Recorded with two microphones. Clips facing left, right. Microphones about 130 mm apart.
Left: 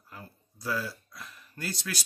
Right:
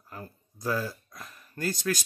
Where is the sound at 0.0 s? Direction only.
45° right (ahead or behind).